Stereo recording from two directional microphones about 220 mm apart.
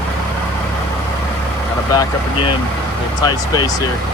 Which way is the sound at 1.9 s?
15° left (ahead or behind).